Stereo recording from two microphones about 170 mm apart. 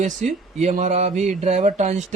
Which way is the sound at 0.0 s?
45° right (ahead or behind).